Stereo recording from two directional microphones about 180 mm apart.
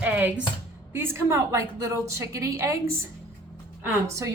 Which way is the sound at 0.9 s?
15° right (ahead or behind).